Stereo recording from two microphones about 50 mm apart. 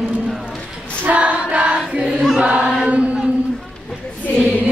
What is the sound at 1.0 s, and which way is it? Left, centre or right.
Choir, right.